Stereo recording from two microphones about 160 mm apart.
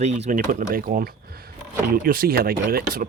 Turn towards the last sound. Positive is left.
turn(degrees=-70)  # may be behind; listen again after turning